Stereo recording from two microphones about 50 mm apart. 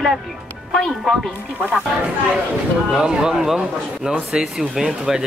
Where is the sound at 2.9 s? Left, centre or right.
Centre.